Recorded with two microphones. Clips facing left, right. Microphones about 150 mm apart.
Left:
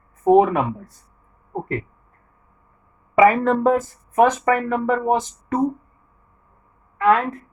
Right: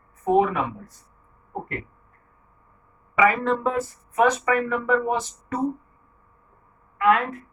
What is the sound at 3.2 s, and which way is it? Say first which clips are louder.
Speech: left 6 dB; 50° left (ahead or behind).